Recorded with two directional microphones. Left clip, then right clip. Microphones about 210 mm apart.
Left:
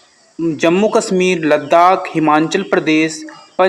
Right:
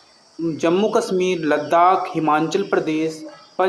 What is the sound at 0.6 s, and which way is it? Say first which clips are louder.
Speech: left 5 dB; 35° left (ahead or behind).